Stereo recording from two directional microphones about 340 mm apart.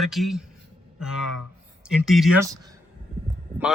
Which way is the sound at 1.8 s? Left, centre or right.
Centre.